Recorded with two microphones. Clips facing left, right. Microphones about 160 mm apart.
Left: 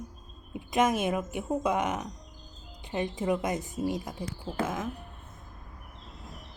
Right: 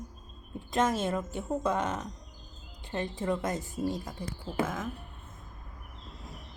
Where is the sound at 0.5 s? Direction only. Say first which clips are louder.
Left 2 dB; 15° left (ahead or behind).